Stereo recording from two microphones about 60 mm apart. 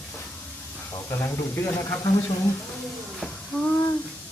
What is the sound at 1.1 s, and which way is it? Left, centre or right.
Speech, left.